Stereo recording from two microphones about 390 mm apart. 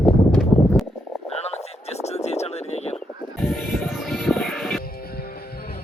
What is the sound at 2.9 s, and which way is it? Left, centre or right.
Music, centre.